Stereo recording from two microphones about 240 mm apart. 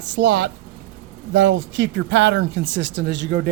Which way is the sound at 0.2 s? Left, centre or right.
Right.